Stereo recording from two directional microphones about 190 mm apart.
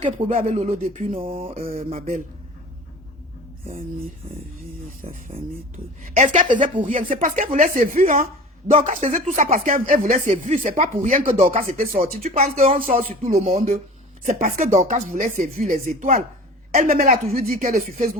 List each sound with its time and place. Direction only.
0.0 s a sound: 30° right (ahead or behind)
0.3 s speech: 40° right (ahead or behind)
1.2 s a sound: 30° right (ahead or behind)
1.5 s speech: 50° right (ahead or behind)
5.0 s speech: 30° right (ahead or behind)
6.0 s speech: 40° right (ahead or behind)